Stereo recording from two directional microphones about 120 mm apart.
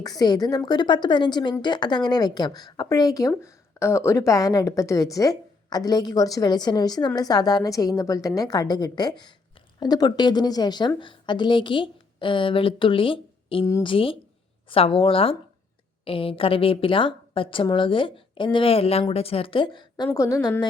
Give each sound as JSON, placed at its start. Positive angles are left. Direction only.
{"t": 0.0, "sound": "a woman's voice", "side_deg": 35}
{"t": 20.1, "sound": "a woman's voice", "side_deg": 30}